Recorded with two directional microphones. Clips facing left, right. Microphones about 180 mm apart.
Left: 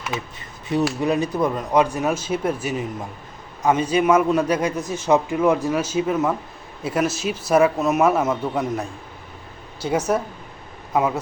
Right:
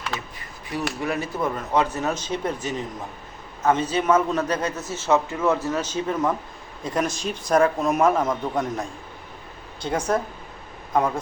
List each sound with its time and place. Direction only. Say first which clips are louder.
0.1 s a man's voice: left 6 dB; 25° left (ahead or behind); by 11.2 s 5° left (ahead or behind)